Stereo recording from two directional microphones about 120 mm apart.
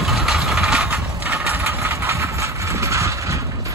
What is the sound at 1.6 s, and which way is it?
Vehicle, 25° right (ahead or behind).